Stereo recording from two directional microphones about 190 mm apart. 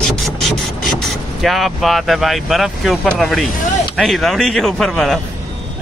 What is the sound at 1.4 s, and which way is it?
Speech, centre (ahead or behind).